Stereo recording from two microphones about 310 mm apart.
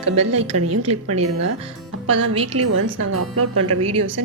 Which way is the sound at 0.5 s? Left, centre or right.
Right.